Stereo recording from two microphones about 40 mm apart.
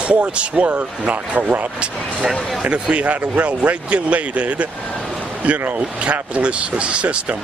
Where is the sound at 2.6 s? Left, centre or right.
Right.